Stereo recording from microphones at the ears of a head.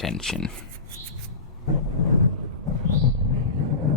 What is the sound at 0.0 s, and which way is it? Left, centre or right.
Speech, left.